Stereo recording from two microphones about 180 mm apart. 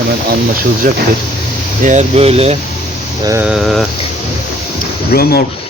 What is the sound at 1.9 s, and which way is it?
Speech, 40° right (ahead or behind).